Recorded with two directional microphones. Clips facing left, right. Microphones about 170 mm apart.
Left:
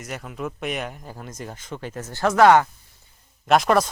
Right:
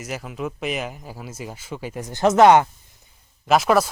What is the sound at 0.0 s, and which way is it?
Speech, 5° right (ahead or behind).